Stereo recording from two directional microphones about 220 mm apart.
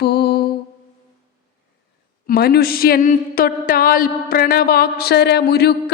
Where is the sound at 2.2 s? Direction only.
45° left (ahead or behind).